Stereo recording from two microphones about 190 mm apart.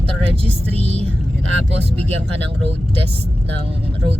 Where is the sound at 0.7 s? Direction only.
30° right (ahead or behind).